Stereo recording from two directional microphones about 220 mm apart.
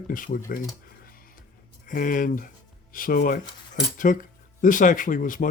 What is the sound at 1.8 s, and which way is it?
Speech, 35° left (ahead or behind).